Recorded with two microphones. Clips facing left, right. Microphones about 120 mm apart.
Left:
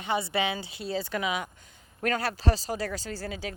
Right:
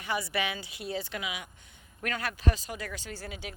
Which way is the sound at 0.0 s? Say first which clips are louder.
Left 4 dB; 25° left (ahead or behind).